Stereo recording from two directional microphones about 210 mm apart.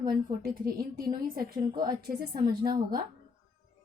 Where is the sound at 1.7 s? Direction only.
20° right (ahead or behind).